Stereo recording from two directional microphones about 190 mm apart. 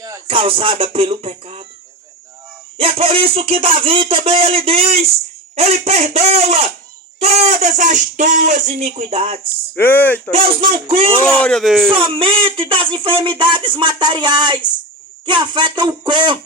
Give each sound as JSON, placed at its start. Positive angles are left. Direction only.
{"t": 0.3, "sound": "speech", "side_deg": -30}
{"t": 2.7, "sound": "speech", "side_deg": -30}
{"t": 9.7, "sound": "speech", "side_deg": 10}
{"t": 10.8, "sound": "speech", "side_deg": -30}
{"t": 11.3, "sound": "speech", "side_deg": 5}
{"t": 11.9, "sound": "speech", "side_deg": -30}